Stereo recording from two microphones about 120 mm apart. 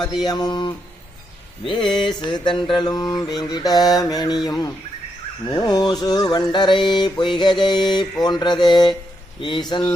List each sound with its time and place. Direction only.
0.0 s speech: centre (ahead or behind)
0.3 s mantra: 35° left (ahead or behind)